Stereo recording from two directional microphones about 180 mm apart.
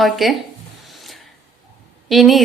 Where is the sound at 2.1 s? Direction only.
Centre (ahead or behind).